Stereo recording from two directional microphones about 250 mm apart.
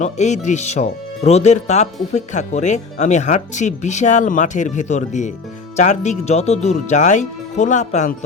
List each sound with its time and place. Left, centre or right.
0.0 s speech: left